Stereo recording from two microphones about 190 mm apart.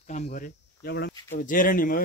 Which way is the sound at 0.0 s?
40° left (ahead or behind).